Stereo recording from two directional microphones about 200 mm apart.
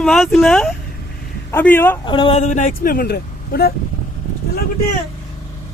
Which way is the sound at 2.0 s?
25° left (ahead or behind).